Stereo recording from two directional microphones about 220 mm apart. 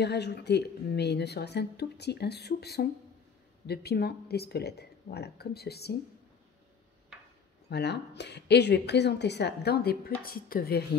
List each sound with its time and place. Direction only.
0.0 s a woman's voice: 50° left (ahead or behind)
7.7 s a woman's voice: 50° left (ahead or behind)